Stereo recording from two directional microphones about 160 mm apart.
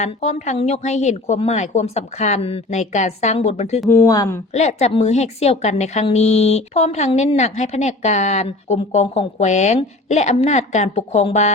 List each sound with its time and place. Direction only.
0.0 s a woman's voice: 45° left (ahead or behind)
3.8 s speech: 20° left (ahead or behind)
4.5 s a woman's voice: 45° left (ahead or behind)